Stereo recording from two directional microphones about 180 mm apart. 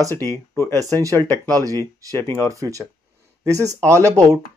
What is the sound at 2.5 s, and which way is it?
Speech, 20° right (ahead or behind).